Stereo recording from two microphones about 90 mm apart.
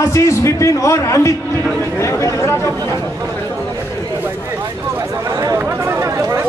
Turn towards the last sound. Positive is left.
turn(degrees=-30)  # may be behind; listen again after turning